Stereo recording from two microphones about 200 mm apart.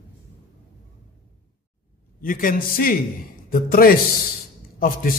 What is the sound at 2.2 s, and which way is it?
A man's voice, 45° left (ahead or behind).